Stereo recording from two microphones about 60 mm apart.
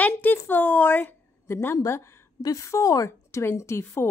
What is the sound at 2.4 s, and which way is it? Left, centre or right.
A woman's voice, left.